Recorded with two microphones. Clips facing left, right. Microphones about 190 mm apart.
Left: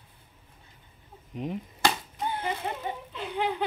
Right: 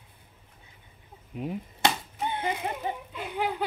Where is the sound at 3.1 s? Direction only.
5° right (ahead or behind).